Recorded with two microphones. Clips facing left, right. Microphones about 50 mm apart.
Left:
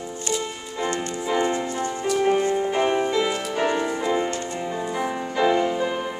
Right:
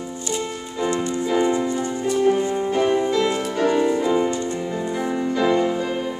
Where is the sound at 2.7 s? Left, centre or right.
Left.